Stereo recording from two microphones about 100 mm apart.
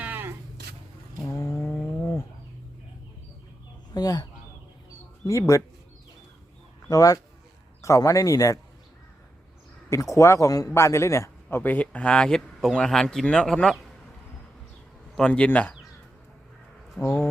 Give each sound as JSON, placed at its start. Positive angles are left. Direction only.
{"t": 0.0, "sound": "a sound", "side_deg": -20}
{"t": 1.4, "sound": "livestock", "side_deg": 25}
{"t": 3.9, "sound": "speech", "side_deg": 40}
{"t": 6.8, "sound": "speech", "side_deg": 35}
{"t": 9.9, "sound": "speech", "side_deg": 30}
{"t": 11.4, "sound": "speech", "side_deg": 15}
{"t": 15.1, "sound": "speech", "side_deg": 10}
{"t": 17.0, "sound": "speech", "side_deg": 10}